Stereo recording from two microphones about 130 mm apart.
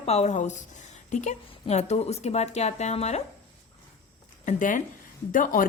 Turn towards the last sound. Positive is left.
turn(degrees=90)